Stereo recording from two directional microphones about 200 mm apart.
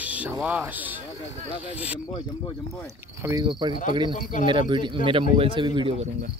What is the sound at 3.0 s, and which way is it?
A man's voice, 15° right (ahead or behind).